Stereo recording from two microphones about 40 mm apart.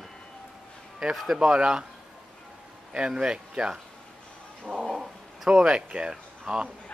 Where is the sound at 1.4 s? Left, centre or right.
Centre.